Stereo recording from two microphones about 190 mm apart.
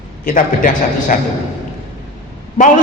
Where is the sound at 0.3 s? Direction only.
45° left (ahead or behind).